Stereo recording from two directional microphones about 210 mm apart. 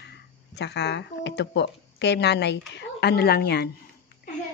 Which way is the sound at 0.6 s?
55° left (ahead or behind).